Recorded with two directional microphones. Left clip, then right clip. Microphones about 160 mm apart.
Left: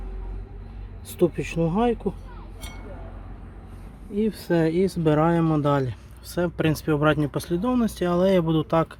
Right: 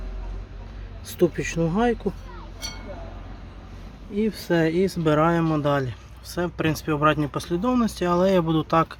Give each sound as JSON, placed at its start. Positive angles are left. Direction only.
{"t": 1.2, "sound": "speech", "side_deg": 10}
{"t": 4.1, "sound": "speech", "side_deg": 10}
{"t": 7.6, "sound": "speech", "side_deg": 10}